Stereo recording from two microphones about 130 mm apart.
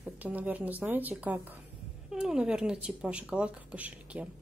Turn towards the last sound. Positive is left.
turn(degrees=-10)  # may be behind; listen again after turning